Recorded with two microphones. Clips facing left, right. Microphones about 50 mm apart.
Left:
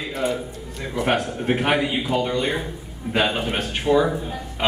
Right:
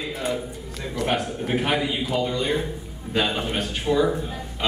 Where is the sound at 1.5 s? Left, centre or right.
Left.